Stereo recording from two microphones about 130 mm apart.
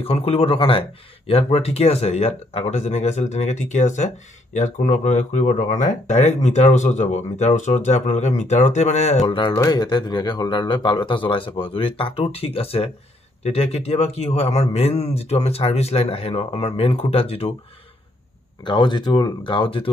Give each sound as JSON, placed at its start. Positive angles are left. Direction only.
{"t": 0.0, "sound": "speech", "side_deg": 50}
{"t": 9.6, "sound": "a man's voice", "side_deg": 30}
{"t": 18.6, "sound": "a man's voice", "side_deg": 35}